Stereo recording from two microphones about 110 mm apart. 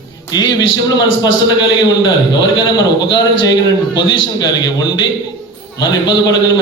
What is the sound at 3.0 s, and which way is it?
A man's voice, 45° left (ahead or behind).